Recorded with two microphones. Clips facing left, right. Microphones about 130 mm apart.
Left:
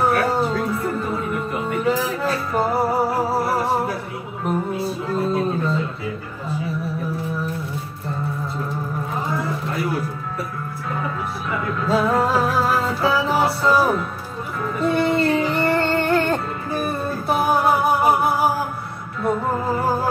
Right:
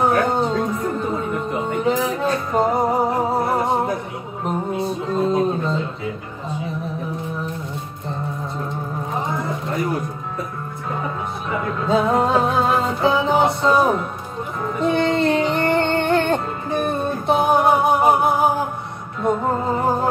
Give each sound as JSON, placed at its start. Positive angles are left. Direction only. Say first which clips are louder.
{"t": 0.0, "sound": "music", "louder": "right 1 dB", "side_deg": -20}
{"t": 9.3, "sound": "a sound", "louder": "even", "side_deg": -20}
{"t": 11.5, "sound": "music", "louder": "right 2 dB", "side_deg": -20}
{"t": 15.0, "sound": "music", "louder": "even", "side_deg": 5}
{"t": 15.3, "sound": "music", "louder": "right 1 dB", "side_deg": -25}